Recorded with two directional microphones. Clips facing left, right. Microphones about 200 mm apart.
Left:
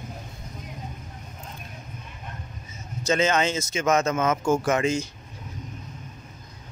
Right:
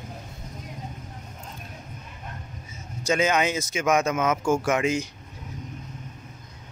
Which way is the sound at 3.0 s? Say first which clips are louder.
Even; 10° right (ahead or behind).